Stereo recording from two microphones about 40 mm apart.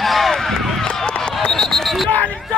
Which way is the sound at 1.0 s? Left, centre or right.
Left.